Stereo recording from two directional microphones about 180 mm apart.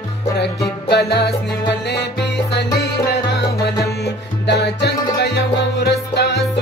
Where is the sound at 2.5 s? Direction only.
65° left (ahead or behind).